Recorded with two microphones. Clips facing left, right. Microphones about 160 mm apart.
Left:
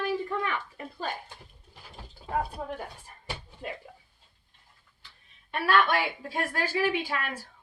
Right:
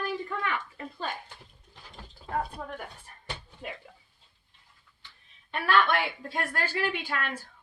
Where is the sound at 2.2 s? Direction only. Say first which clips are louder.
Left 1 dB; 10° left (ahead or behind).